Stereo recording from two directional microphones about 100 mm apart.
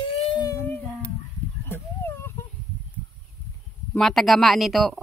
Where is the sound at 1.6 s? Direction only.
25° left (ahead or behind).